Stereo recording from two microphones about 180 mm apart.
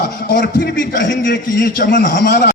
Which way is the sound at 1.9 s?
75° left (ahead or behind).